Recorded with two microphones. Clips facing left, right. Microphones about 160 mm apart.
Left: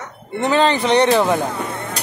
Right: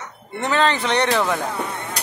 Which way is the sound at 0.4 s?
30° left (ahead or behind).